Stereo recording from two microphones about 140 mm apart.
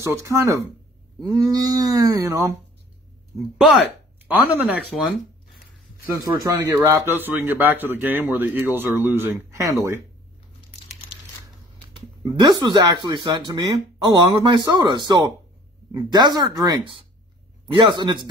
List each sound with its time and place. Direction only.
0.0 s speech: 20° right (ahead or behind)
3.3 s speech: centre (ahead or behind)
4.3 s speech: 10° right (ahead or behind)
4.9 s a sound: centre (ahead or behind)
6.2 s speech: 25° right (ahead or behind)
11.9 s speech: 35° right (ahead or behind)